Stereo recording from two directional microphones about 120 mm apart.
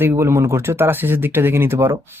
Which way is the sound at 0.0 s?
20° right (ahead or behind).